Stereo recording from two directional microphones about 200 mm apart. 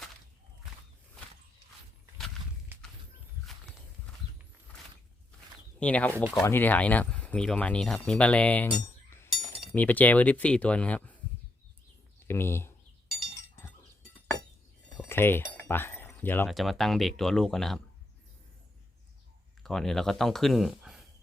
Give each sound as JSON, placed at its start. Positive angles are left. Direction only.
{"t": 5.8, "sound": "speech", "side_deg": 5}
{"t": 6.1, "sound": "speech", "side_deg": -10}
{"t": 6.4, "sound": "speech", "side_deg": 10}
{"t": 8.7, "sound": "chink", "side_deg": 20}
{"t": 9.3, "sound": "speech", "side_deg": 5}
{"t": 12.3, "sound": "speech", "side_deg": 10}
{"t": 14.9, "sound": "a sound", "side_deg": 10}
{"t": 16.5, "sound": "speech", "side_deg": 0}
{"t": 19.6, "sound": "speech", "side_deg": 0}